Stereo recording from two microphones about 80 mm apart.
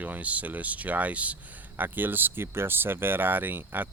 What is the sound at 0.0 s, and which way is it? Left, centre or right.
Speech, centre.